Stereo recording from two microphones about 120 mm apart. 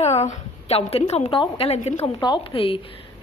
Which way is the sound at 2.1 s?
35° left (ahead or behind).